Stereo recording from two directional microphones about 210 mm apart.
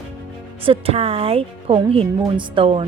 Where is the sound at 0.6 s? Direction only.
25° right (ahead or behind).